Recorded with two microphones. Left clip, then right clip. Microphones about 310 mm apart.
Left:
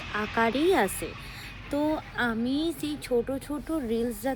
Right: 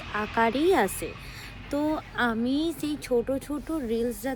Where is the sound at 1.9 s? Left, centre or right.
Centre.